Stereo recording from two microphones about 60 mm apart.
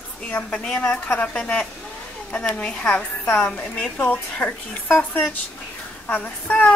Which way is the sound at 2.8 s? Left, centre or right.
Left.